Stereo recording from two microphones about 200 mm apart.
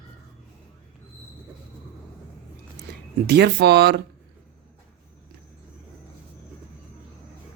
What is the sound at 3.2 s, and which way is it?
Speech, 55° right (ahead or behind).